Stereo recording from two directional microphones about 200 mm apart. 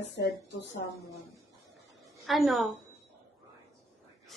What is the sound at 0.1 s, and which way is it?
Speech, 60° left (ahead or behind).